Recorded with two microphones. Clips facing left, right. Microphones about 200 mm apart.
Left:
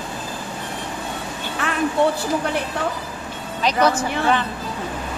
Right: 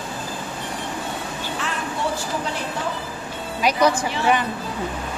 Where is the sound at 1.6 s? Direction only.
55° left (ahead or behind).